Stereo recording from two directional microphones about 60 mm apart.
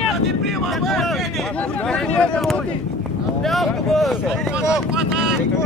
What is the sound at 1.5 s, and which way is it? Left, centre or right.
Speech, left.